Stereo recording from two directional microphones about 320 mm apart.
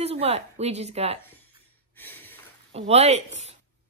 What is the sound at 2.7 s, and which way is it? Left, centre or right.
Speech, centre.